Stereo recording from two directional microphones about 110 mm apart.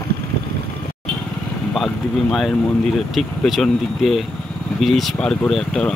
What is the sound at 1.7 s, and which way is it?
Speech, centre (ahead or behind).